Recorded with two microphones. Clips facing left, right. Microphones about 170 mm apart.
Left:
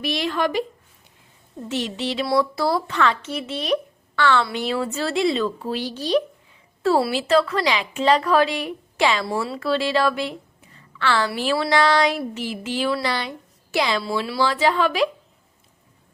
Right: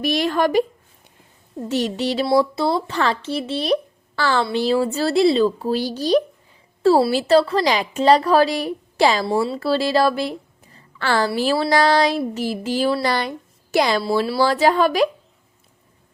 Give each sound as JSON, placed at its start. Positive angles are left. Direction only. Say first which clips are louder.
{"t": 0.0, "sound": "speech", "louder": "right 4 dB", "side_deg": -45}
{"t": 1.6, "sound": "speech", "louder": "right 4 dB", "side_deg": -40}
{"t": 2.2, "sound": "a woman's voice", "louder": "right 2 dB", "side_deg": -25}